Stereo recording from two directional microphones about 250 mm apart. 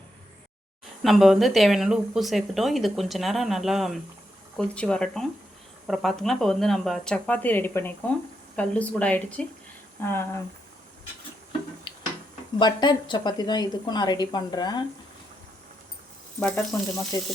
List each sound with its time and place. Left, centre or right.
1.0 s a woman's voice: centre
11.9 s a sound: left
12.5 s a woman's voice: centre
16.4 s a woman's voice: centre